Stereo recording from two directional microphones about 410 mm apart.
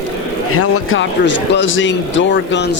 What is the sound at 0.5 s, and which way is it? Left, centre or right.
Speech, left.